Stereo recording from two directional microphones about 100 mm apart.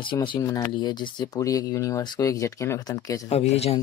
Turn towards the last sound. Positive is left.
turn(degrees=90)